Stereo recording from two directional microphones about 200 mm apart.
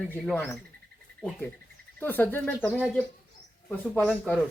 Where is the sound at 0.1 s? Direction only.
5° left (ahead or behind).